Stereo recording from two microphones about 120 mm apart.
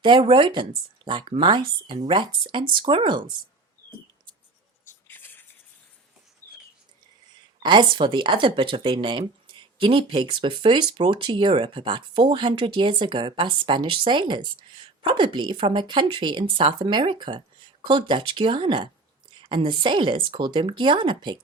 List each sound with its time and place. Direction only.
0.0 s speech: 40° right (ahead or behind)
5.0 s a sound: 15° left (ahead or behind)
7.6 s speech: 40° right (ahead or behind)